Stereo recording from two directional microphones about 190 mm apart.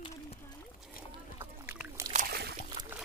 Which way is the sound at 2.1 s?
55° right (ahead or behind).